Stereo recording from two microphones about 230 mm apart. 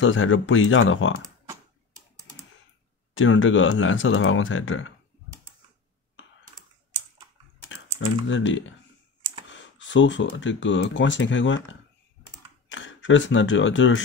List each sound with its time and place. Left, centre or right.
0.0 s speech: left
3.2 s speech: left
7.6 s speech: left
12.6 s speech: left